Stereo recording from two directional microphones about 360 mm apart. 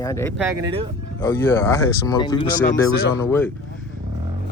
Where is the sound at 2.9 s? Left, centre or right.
Left.